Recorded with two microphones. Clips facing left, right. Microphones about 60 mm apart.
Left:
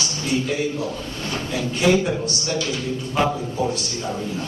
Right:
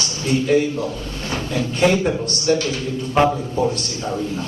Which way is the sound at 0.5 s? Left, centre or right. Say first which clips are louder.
Right 7 dB; right.